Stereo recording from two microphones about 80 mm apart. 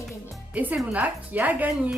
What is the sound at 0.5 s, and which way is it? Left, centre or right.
A woman's voice, centre.